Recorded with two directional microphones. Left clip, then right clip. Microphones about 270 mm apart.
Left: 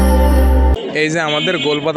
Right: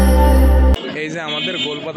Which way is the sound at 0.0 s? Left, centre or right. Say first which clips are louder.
Even; centre.